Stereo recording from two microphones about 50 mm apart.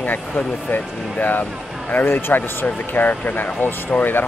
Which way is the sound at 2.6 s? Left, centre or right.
Left.